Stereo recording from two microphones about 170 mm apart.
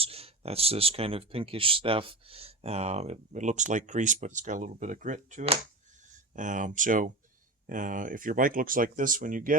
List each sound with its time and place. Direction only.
0.0 s speech: 35° right (ahead or behind); by 9.6 s 55° right (ahead or behind)